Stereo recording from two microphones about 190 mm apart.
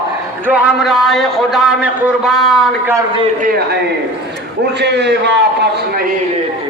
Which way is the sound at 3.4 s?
50° right (ahead or behind).